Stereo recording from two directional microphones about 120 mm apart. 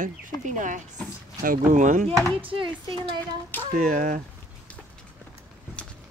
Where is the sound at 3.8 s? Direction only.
90° right.